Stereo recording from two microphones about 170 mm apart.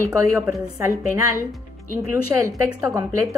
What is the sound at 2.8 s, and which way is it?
Speech, 20° right (ahead or behind).